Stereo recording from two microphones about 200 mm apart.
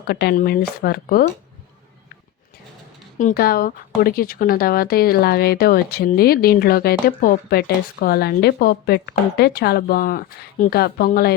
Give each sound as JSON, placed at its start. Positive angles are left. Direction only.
{"t": 0.1, "sound": "speech", "side_deg": 50}
{"t": 3.2, "sound": "speech", "side_deg": 45}